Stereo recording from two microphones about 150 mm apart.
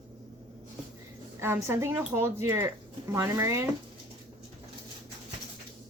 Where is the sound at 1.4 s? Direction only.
15° right (ahead or behind).